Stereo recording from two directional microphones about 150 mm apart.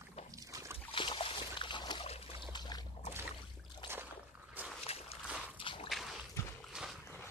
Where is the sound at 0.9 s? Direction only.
35° left (ahead or behind).